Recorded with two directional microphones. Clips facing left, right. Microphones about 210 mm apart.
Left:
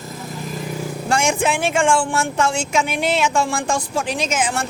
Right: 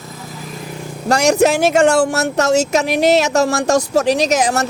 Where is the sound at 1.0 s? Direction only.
40° right (ahead or behind).